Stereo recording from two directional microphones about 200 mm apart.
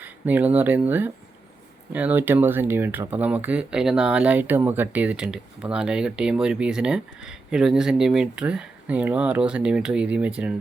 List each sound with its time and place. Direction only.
0.0 s speech: 10° right (ahead or behind)